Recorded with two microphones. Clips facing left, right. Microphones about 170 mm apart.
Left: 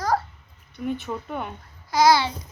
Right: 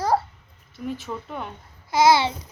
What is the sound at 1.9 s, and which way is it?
Speech, 25° right (ahead or behind).